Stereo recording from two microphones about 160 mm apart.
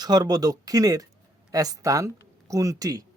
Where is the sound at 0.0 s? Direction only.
25° right (ahead or behind).